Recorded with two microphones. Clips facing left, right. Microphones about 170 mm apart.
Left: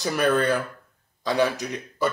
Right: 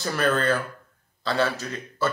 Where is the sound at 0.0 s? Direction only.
15° left (ahead or behind).